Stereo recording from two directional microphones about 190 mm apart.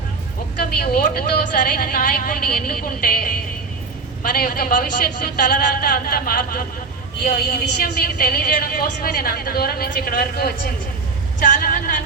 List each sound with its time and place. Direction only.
0.8 s a woman's voice: 55° left (ahead or behind)